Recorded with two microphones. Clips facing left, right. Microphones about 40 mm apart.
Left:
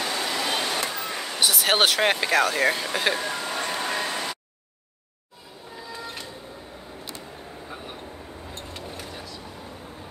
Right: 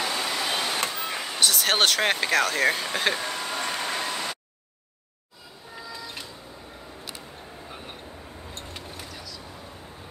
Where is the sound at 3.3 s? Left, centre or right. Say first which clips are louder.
Left 1 dB; left.